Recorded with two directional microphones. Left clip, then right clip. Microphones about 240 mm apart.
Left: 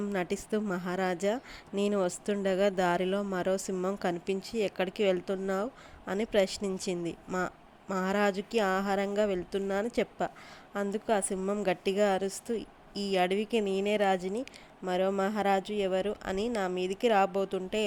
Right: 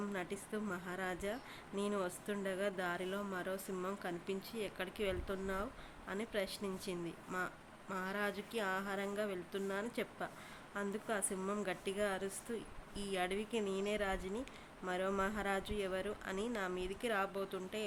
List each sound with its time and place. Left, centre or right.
0.1 s a woman's voice: left
11.6 s a woman's voice: left